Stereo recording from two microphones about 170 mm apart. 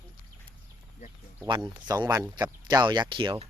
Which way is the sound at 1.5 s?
25° right (ahead or behind).